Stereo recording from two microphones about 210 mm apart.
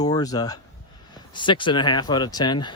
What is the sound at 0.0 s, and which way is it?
Speech, 20° left (ahead or behind).